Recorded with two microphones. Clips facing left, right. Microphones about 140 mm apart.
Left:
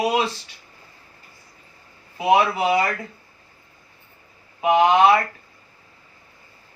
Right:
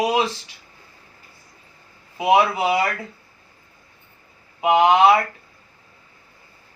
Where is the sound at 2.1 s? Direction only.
15° right (ahead or behind).